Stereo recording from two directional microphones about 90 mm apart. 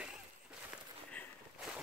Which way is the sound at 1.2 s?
20° left (ahead or behind).